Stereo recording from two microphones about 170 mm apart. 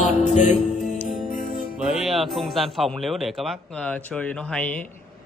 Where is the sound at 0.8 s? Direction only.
Centre (ahead or behind).